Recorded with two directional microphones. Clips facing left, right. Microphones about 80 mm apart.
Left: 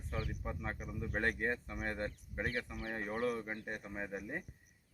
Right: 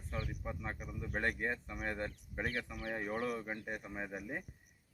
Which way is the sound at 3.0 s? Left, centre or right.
Centre.